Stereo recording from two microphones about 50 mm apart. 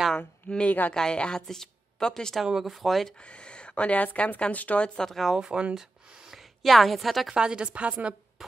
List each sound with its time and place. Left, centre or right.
0.7 s speech: left
0.9 s speech: centre
2.4 s speech: centre
3.3 s speech: left
4.8 s speech: centre
5.4 s speech: centre
6.3 s a woman's voice: centre
7.3 s a woman's voice: centre